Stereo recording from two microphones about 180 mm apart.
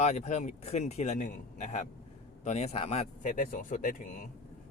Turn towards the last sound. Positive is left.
turn(degrees=45)  # may be behind; listen again after turning